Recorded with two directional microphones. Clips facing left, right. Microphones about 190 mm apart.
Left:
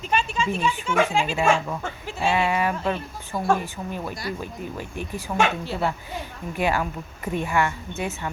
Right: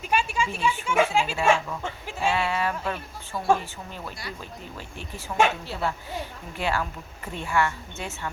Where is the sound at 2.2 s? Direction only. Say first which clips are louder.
Left 3 dB; 15° left (ahead or behind).